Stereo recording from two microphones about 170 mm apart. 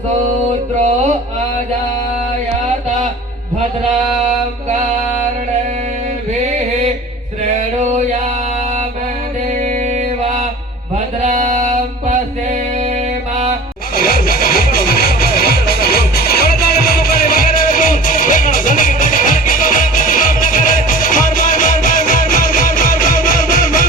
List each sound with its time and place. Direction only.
11.3 s music: 45° right (ahead or behind)
13.9 s music: 60° left (ahead or behind)